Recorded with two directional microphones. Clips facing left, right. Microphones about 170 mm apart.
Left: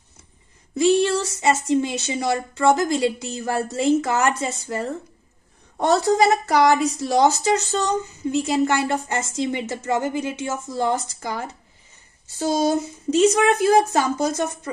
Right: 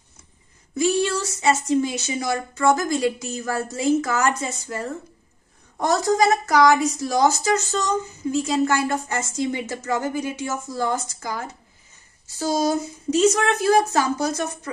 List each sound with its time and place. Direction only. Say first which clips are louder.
0.7 s a woman's voice: left 3 dB; 30° left (ahead or behind)